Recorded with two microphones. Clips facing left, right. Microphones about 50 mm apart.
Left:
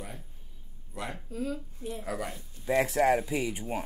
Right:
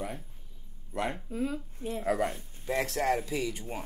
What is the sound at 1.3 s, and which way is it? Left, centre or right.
A woman's voice, right.